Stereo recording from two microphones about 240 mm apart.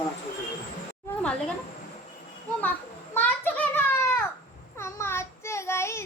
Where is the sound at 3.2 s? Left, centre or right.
Centre.